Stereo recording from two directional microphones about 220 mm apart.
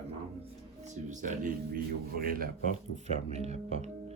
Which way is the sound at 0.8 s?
35° right (ahead or behind).